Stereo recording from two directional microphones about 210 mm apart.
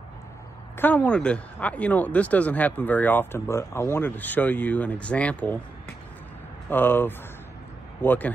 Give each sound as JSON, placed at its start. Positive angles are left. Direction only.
{"t": 0.7, "sound": "speech", "side_deg": 5}
{"t": 6.7, "sound": "speech", "side_deg": 10}